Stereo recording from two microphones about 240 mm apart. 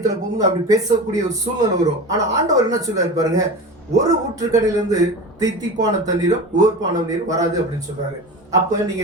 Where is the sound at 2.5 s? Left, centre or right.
Centre.